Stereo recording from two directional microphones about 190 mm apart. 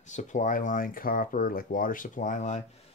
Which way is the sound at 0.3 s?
45° left (ahead or behind).